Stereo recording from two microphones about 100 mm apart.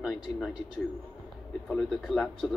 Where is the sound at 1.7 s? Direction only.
5° left (ahead or behind).